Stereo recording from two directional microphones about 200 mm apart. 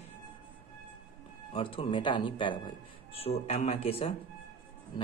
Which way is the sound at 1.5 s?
25° left (ahead or behind).